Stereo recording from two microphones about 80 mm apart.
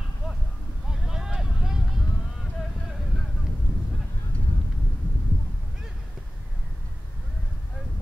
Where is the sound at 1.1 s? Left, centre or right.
Centre.